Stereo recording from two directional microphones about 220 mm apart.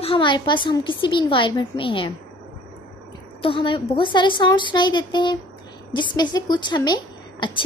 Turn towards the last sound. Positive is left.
turn(degrees=20)  # may be behind; listen again after turning